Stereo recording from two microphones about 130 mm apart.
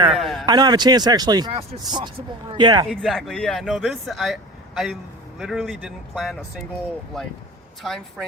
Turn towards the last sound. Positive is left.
turn(degrees=0)  # may be behind; listen again after turning